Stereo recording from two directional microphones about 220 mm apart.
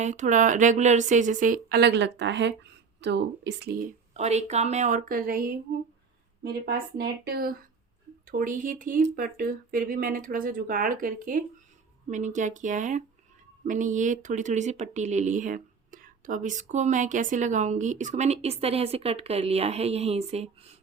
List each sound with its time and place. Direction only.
0.0 s speech: 35° right (ahead or behind)
6.4 s a woman's voice: 45° right (ahead or behind); by 20.7 s 30° right (ahead or behind)